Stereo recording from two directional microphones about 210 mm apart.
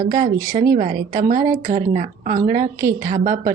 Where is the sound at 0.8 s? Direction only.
35° right (ahead or behind).